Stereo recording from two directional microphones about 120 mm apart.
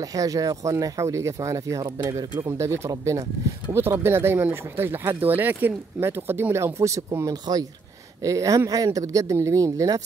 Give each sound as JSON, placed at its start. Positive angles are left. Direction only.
{"t": 0.0, "sound": "speech", "side_deg": -30}